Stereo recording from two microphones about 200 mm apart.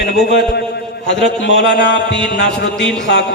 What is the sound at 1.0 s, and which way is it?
Speech, 60° left (ahead or behind).